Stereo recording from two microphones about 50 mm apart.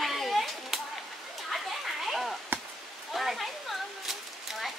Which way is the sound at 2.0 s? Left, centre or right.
Centre.